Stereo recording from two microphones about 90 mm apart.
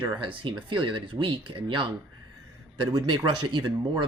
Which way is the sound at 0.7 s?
65° right (ahead or behind).